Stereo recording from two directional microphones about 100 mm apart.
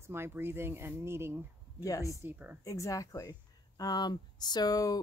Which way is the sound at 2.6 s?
35° left (ahead or behind).